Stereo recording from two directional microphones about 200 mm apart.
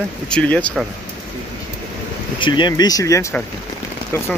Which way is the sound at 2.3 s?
25° left (ahead or behind).